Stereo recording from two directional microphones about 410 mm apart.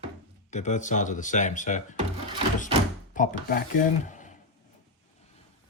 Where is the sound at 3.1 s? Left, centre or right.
Centre.